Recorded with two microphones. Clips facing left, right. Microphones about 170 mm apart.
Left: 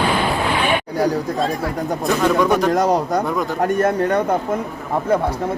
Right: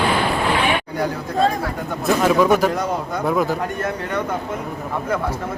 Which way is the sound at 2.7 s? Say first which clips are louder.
Left 6 dB; 40° left (ahead or behind).